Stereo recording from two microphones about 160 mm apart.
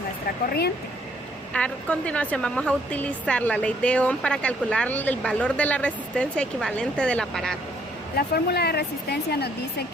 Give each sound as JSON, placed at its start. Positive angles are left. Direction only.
{"t": 1.5, "sound": "a woman's voice", "side_deg": 5}
{"t": 8.1, "sound": "speech", "side_deg": 80}